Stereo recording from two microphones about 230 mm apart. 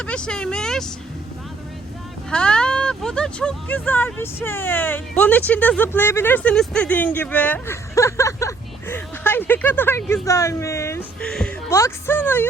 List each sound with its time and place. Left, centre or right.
0.0 s speech: centre
2.3 s speech: centre